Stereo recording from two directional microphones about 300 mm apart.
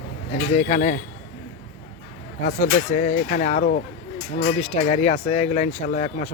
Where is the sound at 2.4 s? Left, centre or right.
Left.